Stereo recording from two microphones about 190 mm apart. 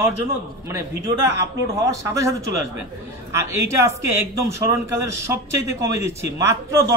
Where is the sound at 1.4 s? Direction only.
15° right (ahead or behind).